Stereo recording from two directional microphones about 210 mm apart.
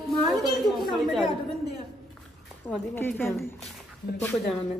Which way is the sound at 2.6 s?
10° left (ahead or behind).